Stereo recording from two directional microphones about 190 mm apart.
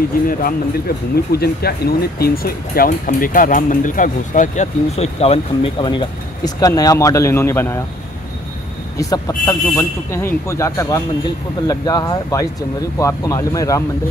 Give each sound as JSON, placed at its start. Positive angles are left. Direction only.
{"t": 0.3, "sound": "speech", "side_deg": 50}
{"t": 8.9, "sound": "a man's voice", "side_deg": 20}